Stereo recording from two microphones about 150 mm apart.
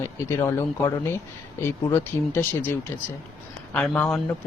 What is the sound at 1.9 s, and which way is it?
Speech, 15° left (ahead or behind).